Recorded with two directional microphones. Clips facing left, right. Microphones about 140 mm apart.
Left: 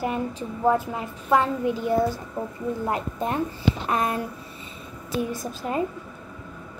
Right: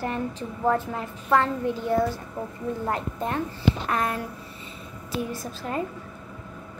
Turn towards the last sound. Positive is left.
turn(degrees=15)  # may be behind; listen again after turning